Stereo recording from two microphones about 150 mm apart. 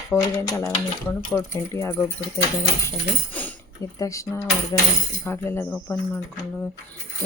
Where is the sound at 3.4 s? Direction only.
10° left (ahead or behind).